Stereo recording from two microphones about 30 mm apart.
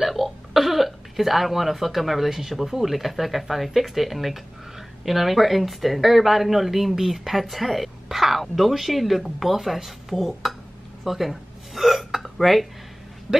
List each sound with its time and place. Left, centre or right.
0.0 s throat clearing: centre
2.8 s speech: centre
11.1 s hiccup: centre
13.3 s speech: right